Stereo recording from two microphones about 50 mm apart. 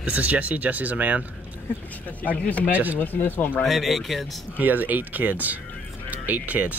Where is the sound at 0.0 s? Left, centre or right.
Right.